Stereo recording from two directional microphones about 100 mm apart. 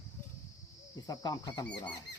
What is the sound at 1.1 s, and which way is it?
Speech, 40° left (ahead or behind).